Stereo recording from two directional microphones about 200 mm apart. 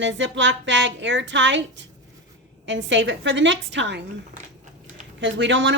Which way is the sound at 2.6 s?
65° right (ahead or behind).